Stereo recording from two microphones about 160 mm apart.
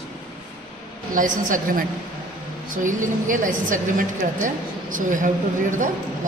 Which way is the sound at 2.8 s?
55° right (ahead or behind).